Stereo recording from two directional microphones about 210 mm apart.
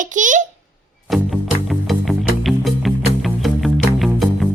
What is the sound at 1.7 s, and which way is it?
Music, centre (ahead or behind).